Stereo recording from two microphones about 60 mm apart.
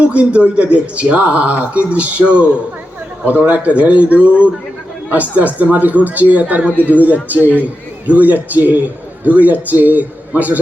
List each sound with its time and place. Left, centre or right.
0.0 s a man's voice: centre
6.7 s speech: left
7.0 s a man's voice: right